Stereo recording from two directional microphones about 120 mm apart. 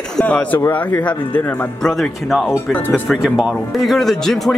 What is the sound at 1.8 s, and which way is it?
Speech, 5° left (ahead or behind).